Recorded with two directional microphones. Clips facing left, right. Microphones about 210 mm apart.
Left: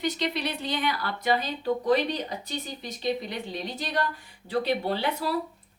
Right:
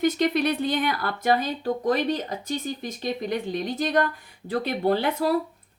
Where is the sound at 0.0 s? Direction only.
50° right (ahead or behind).